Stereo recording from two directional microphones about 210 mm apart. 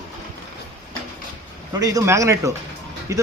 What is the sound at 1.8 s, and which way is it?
A man's voice, 15° right (ahead or behind).